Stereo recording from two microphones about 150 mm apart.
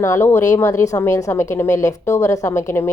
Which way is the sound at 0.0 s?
20° left (ahead or behind).